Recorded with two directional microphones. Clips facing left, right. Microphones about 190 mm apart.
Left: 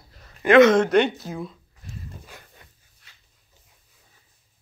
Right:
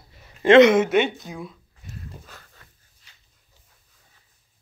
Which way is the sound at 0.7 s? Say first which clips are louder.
Left 1 dB; 5° right (ahead or behind).